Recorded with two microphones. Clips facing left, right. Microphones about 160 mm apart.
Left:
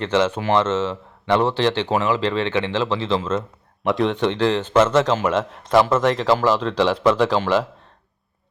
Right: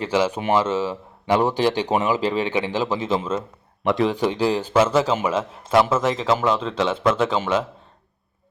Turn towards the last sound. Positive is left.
turn(degrees=0)  # may be behind; listen again after turning